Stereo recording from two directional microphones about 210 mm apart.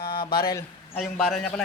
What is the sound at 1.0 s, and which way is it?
Speech, centre (ahead or behind).